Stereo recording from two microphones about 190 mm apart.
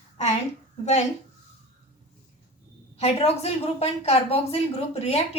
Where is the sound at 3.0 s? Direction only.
35° left (ahead or behind).